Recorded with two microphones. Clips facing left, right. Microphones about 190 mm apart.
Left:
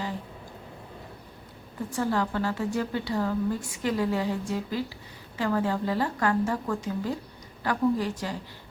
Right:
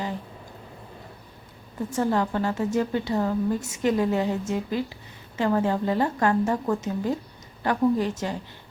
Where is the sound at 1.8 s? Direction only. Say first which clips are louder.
Right 3 dB; 25° right (ahead or behind).